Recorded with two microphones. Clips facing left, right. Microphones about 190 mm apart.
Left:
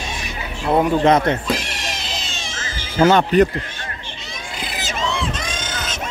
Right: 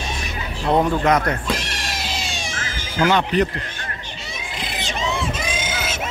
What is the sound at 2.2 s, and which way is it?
Cat, 15° right (ahead or behind).